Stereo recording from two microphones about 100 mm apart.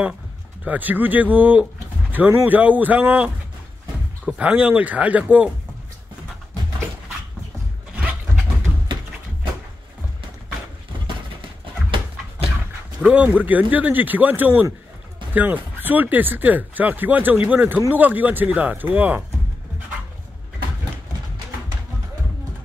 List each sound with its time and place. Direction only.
0.7 s speech: 15° right (ahead or behind)
4.4 s speech: 10° right (ahead or behind)
13.0 s speech: 15° right (ahead or behind)